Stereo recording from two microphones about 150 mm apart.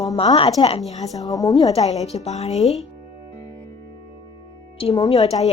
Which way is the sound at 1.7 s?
45° left (ahead or behind).